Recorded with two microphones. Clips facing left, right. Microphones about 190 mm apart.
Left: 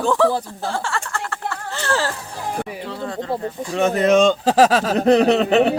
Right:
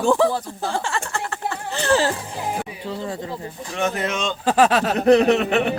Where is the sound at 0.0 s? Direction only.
15° right (ahead or behind).